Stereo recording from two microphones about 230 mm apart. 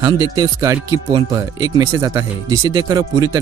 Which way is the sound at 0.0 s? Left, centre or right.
Centre.